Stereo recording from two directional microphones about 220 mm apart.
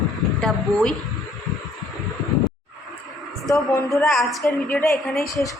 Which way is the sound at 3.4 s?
15° left (ahead or behind).